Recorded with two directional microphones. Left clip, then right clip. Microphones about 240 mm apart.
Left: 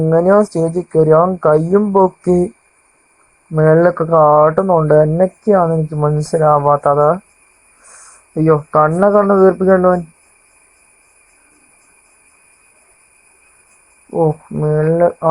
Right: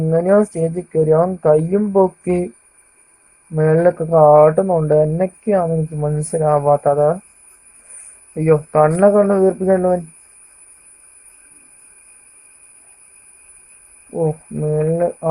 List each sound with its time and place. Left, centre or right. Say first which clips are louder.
0.1 s speech: left 3 dB; centre
1.9 s music: even; centre
3.5 s speech: left 4 dB; centre
3.9 s speech: even; centre
8.4 s speech: left 1 dB; centre
14.1 s speech: left 5 dB; left